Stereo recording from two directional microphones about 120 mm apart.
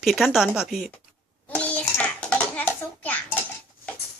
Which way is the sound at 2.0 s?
10° left (ahead or behind).